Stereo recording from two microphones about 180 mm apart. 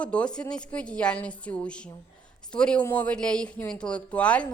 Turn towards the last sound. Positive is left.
turn(degrees=5)  # may be behind; listen again after turning